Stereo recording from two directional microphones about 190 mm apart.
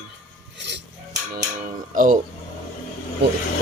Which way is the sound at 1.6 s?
45° right (ahead or behind).